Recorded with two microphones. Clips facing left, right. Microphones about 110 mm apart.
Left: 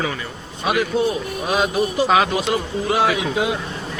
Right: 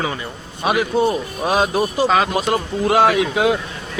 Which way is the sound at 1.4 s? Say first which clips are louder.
Right 3 dB; 40° right (ahead or behind).